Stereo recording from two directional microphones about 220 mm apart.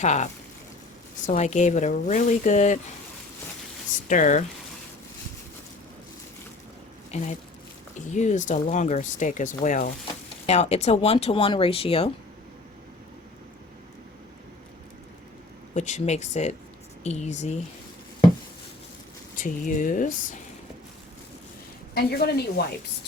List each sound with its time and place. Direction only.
0.0 s speech: 30° left (ahead or behind)
1.3 s speech: 30° left (ahead or behind)
4.1 s speech: 35° left (ahead or behind)
7.1 s speech: 30° left (ahead or behind)
15.7 s speech: 35° left (ahead or behind)
19.4 s speech: 35° left (ahead or behind)
21.9 s a woman's voice: 45° left (ahead or behind)